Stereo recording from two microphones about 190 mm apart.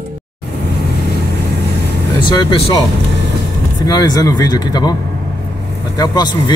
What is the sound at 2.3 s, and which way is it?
Speech, 25° left (ahead or behind).